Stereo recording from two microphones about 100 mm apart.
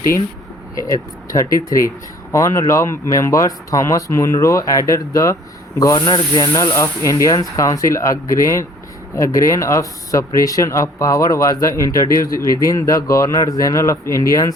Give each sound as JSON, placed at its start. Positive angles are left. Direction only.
{"t": 0.8, "sound": "speech", "side_deg": 35}
{"t": 6.0, "sound": "speech", "side_deg": 50}
{"t": 6.4, "sound": "speech", "side_deg": 35}